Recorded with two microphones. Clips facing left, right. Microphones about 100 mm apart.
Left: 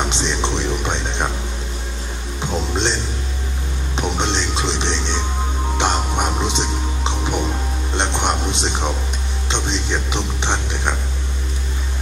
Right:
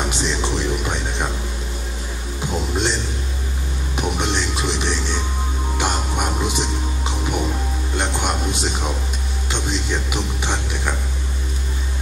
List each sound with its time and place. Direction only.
0.0 s music: 25° left (ahead or behind)
2.4 s music: 25° left (ahead or behind)
3.9 s train: 25° left (ahead or behind)
5.8 s music: 25° left (ahead or behind)